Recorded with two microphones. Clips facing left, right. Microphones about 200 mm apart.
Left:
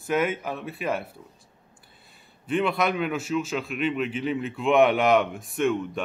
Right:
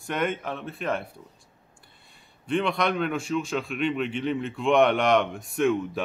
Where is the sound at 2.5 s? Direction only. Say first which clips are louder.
Left 1 dB; 5° left (ahead or behind).